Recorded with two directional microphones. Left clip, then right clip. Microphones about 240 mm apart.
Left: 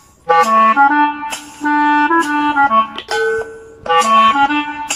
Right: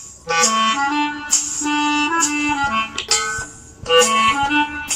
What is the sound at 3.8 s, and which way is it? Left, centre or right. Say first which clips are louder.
Music: left 4 dB; left.